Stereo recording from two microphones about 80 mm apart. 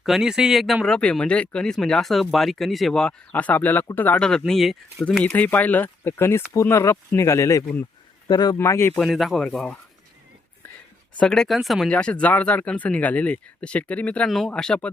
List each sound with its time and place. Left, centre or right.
0.0 s speech: centre
0.9 s speech: centre
4.2 s speech: centre
5.2 s speech: centre; by 7.6 s left
8.3 s speech: left
8.5 s speech: left
9.0 s speech: centre
11.2 s speech: centre
11.9 s speech: centre
14.3 s speech: centre
14.5 s speech: centre